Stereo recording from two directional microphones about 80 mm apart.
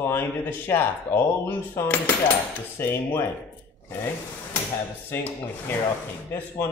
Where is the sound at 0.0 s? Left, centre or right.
Left.